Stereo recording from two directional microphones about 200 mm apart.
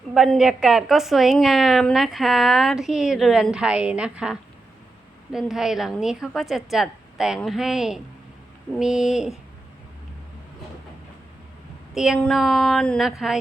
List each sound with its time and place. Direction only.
0.1 s a woman's voice: centre (ahead or behind)
12.0 s a woman's voice: centre (ahead or behind)